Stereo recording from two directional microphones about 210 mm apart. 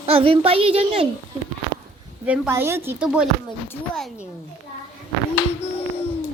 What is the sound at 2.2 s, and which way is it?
Speech, 5° right (ahead or behind).